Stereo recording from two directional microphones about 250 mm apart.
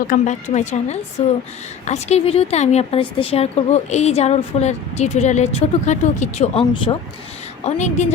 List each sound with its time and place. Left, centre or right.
0.1 s a woman's voice: left